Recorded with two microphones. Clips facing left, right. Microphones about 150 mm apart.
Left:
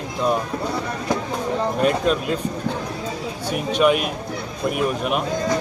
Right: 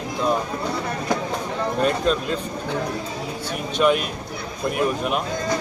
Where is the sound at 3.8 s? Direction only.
5° left (ahead or behind).